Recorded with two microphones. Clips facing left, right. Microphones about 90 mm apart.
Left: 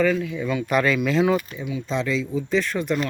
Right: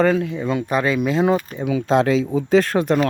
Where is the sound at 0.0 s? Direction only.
45° right (ahead or behind); by 1.2 s 25° right (ahead or behind).